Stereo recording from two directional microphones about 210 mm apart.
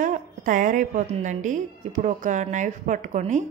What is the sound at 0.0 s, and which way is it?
A woman's voice, 40° right (ahead or behind).